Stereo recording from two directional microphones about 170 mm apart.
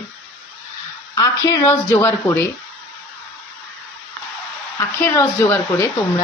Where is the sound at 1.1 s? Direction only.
20° left (ahead or behind).